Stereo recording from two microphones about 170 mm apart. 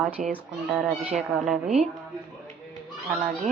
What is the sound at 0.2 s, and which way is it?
Speech, 50° right (ahead or behind).